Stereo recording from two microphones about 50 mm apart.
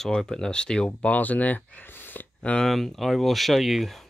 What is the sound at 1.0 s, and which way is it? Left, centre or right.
Speech, left.